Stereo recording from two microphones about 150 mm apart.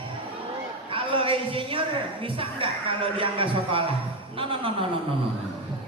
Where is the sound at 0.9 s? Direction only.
35° right (ahead or behind).